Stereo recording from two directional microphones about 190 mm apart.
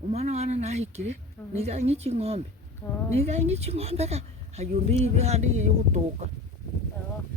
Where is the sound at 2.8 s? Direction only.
10° left (ahead or behind).